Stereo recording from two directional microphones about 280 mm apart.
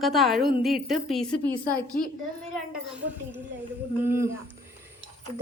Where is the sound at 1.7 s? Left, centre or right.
Left.